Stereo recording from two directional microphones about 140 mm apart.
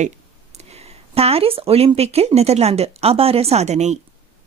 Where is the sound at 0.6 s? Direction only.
45° right (ahead or behind).